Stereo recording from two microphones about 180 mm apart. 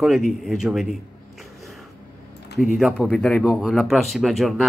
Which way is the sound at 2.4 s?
60° left (ahead or behind).